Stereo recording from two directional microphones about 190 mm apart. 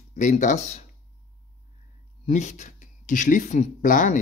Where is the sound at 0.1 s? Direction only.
40° left (ahead or behind).